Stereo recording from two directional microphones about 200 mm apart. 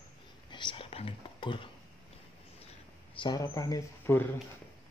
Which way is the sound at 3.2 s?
20° left (ahead or behind).